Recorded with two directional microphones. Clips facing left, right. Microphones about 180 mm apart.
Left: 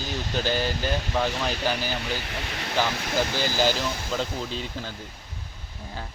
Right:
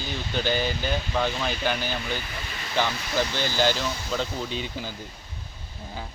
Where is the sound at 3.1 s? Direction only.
5° left (ahead or behind).